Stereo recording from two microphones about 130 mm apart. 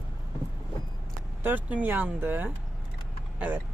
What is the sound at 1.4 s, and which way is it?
Speech, 15° right (ahead or behind).